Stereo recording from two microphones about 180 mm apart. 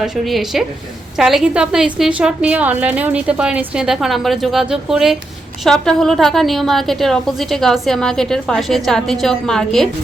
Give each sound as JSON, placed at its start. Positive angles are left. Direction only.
{"t": 0.0, "sound": "a woman's voice", "side_deg": 0}